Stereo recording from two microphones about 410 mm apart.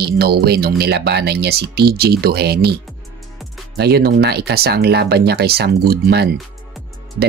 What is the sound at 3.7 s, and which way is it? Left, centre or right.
Speech, right.